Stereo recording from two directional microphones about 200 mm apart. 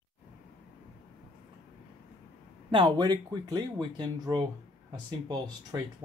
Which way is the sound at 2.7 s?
20° right (ahead or behind).